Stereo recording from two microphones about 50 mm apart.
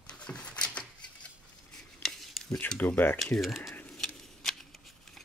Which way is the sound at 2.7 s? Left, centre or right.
Left.